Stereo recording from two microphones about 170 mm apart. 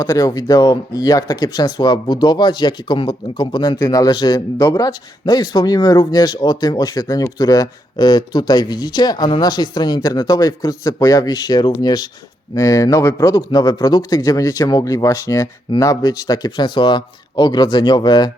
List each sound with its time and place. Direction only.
0.0 s speech: 20° left (ahead or behind)